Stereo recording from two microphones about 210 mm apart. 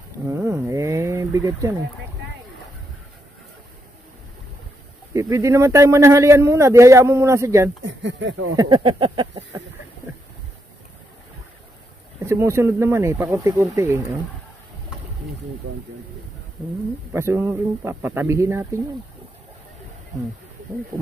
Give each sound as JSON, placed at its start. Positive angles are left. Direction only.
{"t": 0.3, "sound": "speech", "side_deg": -10}
{"t": 5.1, "sound": "a man's voice", "side_deg": -15}
{"t": 7.8, "sound": "speech", "side_deg": -60}
{"t": 8.5, "sound": "a sound", "side_deg": -20}
{"t": 12.2, "sound": "a man's voice", "side_deg": -15}
{"t": 17.1, "sound": "a man's voice", "side_deg": -10}